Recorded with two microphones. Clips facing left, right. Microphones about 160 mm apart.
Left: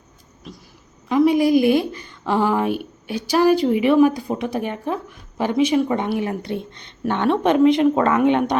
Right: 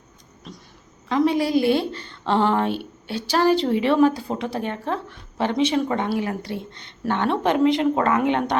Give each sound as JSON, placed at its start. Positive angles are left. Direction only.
{"t": 0.5, "sound": "speech", "side_deg": 0}
{"t": 1.0, "sound": "a woman's voice", "side_deg": 15}